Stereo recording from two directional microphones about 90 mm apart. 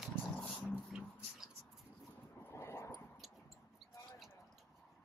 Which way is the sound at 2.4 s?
30° left (ahead or behind).